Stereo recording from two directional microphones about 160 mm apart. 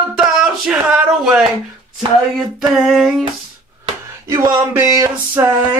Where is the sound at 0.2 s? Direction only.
5° right (ahead or behind).